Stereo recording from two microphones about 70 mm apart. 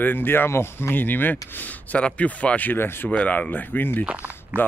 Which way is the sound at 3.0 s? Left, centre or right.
Centre.